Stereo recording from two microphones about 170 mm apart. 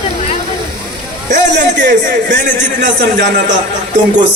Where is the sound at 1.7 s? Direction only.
90° right.